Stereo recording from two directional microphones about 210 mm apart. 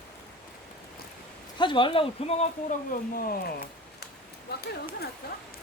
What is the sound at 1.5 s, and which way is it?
Speech, 20° left (ahead or behind).